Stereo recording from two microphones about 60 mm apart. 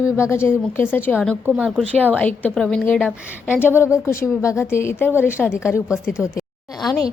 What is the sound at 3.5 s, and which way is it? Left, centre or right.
A woman's voice, left.